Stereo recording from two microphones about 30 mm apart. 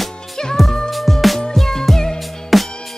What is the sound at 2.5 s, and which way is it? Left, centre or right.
Music, centre.